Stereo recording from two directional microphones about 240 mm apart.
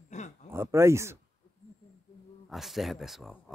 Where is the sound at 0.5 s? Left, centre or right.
Centre.